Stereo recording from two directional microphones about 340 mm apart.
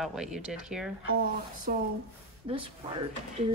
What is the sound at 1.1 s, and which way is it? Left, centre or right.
Speech, right.